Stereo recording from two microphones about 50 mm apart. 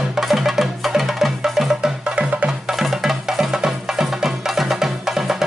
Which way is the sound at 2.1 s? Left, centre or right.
Right.